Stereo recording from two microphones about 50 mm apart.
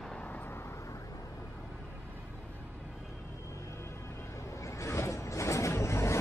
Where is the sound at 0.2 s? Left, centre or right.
Left.